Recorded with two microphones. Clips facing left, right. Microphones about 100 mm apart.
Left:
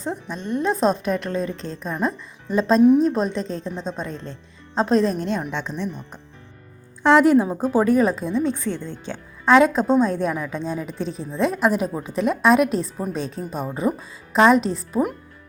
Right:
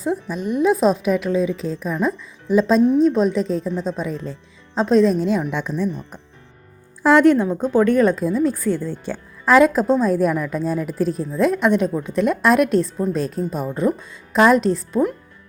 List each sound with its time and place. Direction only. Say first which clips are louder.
0.0 s speech: right 6 dB; 5° right (ahead or behind)
5.5 s speech: right 3 dB; 20° left (ahead or behind)
7.0 s speech: right 1 dB; centre (ahead or behind)